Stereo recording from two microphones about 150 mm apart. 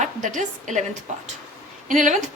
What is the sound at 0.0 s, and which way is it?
Speech, 55° right (ahead or behind).